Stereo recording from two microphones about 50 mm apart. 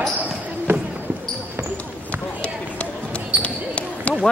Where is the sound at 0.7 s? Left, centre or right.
Right.